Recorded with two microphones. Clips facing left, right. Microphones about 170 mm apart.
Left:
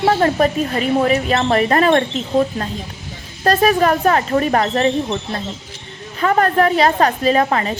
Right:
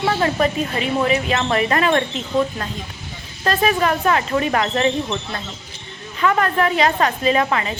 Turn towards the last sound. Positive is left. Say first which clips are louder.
# left 3 dB
turn(degrees=40)  # may be behind; listen again after turning